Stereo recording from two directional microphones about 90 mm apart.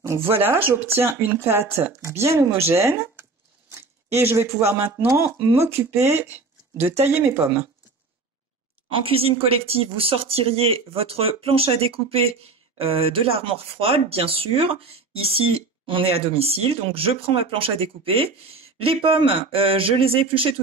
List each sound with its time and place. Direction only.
0.0 s speech: 30° right (ahead or behind)
9.0 s speech: 90° right